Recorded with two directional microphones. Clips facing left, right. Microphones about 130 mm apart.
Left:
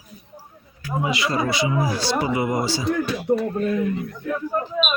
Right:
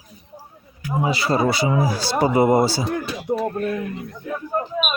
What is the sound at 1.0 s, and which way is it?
Speech, 35° right (ahead or behind).